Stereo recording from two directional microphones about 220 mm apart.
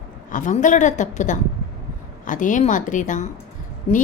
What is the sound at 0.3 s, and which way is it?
A woman's voice, 35° left (ahead or behind).